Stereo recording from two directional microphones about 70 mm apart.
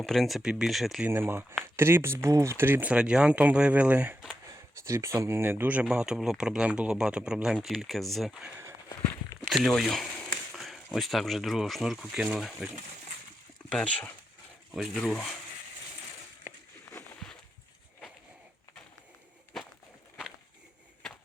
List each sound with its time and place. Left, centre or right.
0.0 s speech: centre
1.0 s speech: right
2.8 s speech: centre
4.8 s speech: right
5.2 s speech: right; by 8.3 s centre
9.6 s speech: centre
10.5 s a sound: centre
10.9 s speech: centre
13.7 s speech: centre